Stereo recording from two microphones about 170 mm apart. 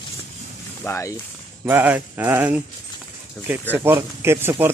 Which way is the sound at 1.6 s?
10° right (ahead or behind).